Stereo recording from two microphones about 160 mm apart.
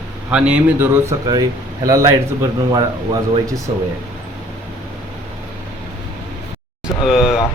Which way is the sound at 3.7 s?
45° right (ahead or behind).